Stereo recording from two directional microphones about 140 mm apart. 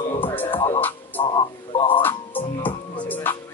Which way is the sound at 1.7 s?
35° left (ahead or behind).